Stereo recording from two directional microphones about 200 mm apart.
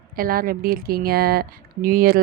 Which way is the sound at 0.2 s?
45° right (ahead or behind).